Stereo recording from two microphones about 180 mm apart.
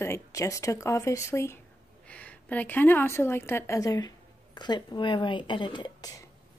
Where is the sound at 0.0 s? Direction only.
15° left (ahead or behind).